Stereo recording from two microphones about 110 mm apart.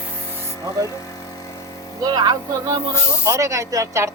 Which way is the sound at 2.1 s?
40° right (ahead or behind).